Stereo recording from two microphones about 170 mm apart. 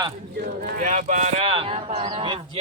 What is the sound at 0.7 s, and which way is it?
Speech, 50° right (ahead or behind).